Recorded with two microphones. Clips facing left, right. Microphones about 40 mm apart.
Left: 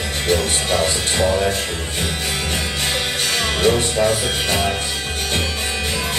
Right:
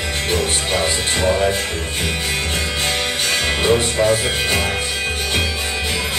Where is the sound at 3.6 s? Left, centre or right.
Centre.